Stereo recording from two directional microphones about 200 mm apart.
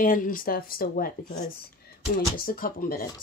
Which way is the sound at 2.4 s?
45° left (ahead or behind).